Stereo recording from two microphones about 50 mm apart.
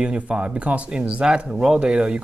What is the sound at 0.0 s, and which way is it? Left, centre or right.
Speech, right.